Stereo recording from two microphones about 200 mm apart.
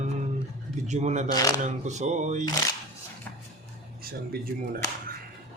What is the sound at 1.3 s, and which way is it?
Speech, 20° left (ahead or behind).